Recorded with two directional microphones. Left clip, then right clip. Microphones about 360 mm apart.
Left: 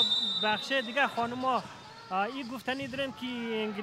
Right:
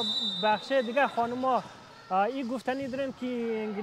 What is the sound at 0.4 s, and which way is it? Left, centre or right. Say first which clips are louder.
A man's voice: right 3 dB; centre.